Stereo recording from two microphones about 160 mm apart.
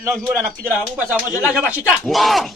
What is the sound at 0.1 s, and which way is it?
Speech, centre (ahead or behind).